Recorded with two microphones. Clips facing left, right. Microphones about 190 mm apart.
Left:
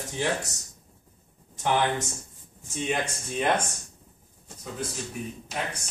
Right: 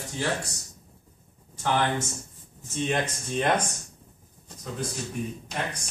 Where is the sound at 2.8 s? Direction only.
10° left (ahead or behind).